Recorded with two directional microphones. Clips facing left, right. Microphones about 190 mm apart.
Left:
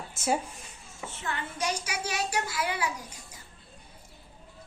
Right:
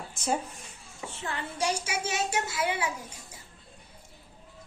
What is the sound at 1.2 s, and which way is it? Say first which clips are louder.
A child's voice: right 1 dB; 30° right (ahead or behind).